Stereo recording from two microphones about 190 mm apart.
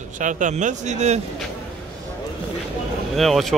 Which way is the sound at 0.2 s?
40° right (ahead or behind).